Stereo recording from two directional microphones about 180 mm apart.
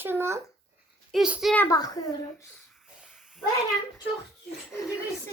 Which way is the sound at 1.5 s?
20° left (ahead or behind).